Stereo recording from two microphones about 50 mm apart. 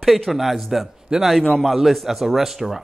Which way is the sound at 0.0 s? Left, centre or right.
Centre.